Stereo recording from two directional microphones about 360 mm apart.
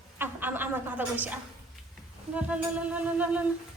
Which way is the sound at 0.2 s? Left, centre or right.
Centre.